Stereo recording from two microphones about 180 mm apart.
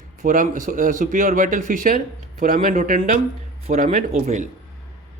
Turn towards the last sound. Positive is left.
turn(degrees=-40)  # may be behind; listen again after turning